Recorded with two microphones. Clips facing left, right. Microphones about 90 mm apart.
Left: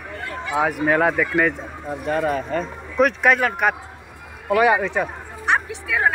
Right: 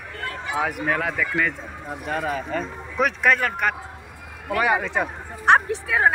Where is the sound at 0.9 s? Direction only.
35° left (ahead or behind).